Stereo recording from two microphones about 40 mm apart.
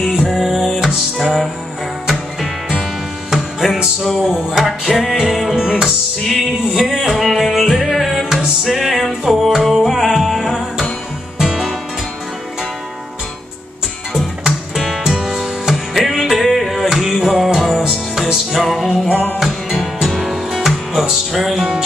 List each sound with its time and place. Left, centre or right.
0.1 s music: centre
3.3 s music: centre
4.9 s music: centre
5.2 s music: centre
6.2 s music: centre
11.3 s music: centre
15.0 s music: centre